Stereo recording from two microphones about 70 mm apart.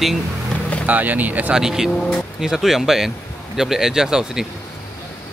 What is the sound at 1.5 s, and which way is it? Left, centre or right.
Speech, centre.